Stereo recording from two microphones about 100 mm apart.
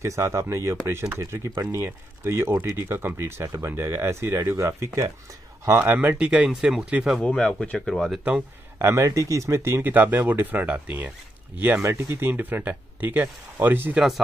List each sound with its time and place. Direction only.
0.0 s speech: 30° right (ahead or behind); by 7.1 s 10° right (ahead or behind)
7.2 s speech: 10° left (ahead or behind)
8.2 s speech: 10° right (ahead or behind)
8.7 s speech: 25° right (ahead or behind)